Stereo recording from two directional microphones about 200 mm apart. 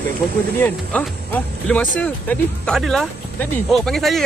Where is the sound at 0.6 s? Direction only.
10° left (ahead or behind).